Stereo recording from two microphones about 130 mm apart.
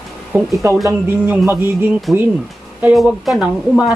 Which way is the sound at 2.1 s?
Centre (ahead or behind).